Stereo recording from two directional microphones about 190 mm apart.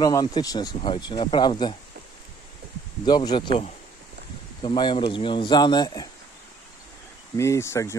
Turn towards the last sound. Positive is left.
turn(degrees=15)  # may be behind; listen again after turning